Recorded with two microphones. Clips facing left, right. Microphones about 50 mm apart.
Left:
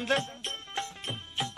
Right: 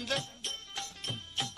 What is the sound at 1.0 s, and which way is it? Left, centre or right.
Music, centre.